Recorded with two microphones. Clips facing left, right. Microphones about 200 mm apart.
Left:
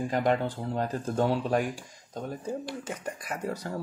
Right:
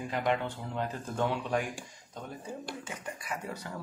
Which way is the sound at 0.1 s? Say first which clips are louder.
Left 3 dB; 40° left (ahead or behind).